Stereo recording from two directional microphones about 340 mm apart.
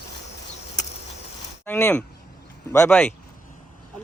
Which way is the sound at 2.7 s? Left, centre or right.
Centre.